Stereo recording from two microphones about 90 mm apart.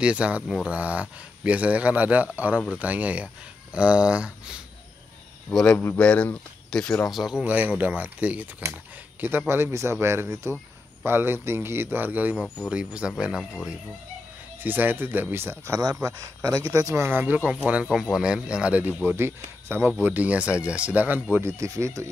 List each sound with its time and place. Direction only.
0.0 s speech: 15° right (ahead or behind)
5.7 s speech: 20° left (ahead or behind)
7.1 s speech: 5° right (ahead or behind)
9.5 s a man's voice: 30° right (ahead or behind); by 13.6 s 5° right (ahead or behind)
14.6 s a man's voice: 20° right (ahead or behind)
17.2 s a man's voice: 20° right (ahead or behind)
21.5 s speech: 35° right (ahead or behind)